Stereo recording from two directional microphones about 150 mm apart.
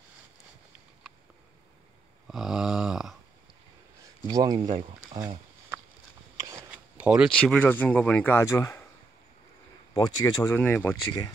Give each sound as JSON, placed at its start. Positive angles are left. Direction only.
{"t": 2.2, "sound": "a sound", "side_deg": 0}
{"t": 4.3, "sound": "speech", "side_deg": -25}
{"t": 6.7, "sound": "a sound", "side_deg": -5}
{"t": 7.3, "sound": "speech", "side_deg": 10}
{"t": 9.9, "sound": "speech", "side_deg": 25}
{"t": 10.6, "sound": "speech", "side_deg": 10}
{"t": 11.1, "sound": "speech", "side_deg": 25}